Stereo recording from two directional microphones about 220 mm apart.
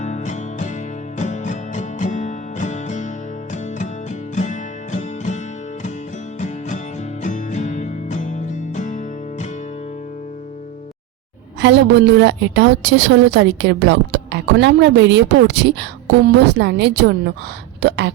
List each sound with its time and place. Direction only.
0.0 s music: 35° left (ahead or behind)
4.4 s music: 35° left (ahead or behind)
7.2 s music: 35° left (ahead or behind)
11.6 s a woman's voice: 55° right (ahead or behind)